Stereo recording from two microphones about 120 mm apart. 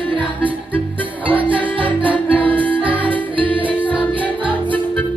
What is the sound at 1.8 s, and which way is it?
Music, 10° right (ahead or behind).